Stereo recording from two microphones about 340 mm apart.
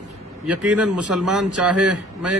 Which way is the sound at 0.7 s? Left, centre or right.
Centre.